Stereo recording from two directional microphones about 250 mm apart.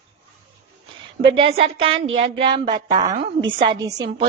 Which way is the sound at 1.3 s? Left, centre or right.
Right.